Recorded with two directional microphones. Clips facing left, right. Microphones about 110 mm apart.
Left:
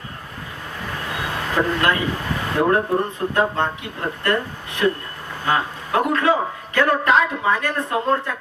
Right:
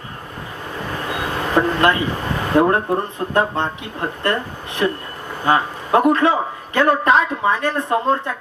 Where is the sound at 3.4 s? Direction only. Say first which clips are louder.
Right 2 dB; 25° right (ahead or behind).